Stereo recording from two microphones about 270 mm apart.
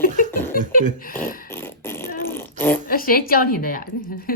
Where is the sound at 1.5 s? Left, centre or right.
Centre.